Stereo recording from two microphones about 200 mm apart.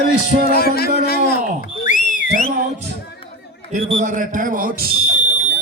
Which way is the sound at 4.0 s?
40° right (ahead or behind).